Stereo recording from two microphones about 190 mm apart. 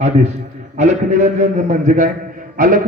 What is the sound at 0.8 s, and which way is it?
A man's voice, 40° right (ahead or behind).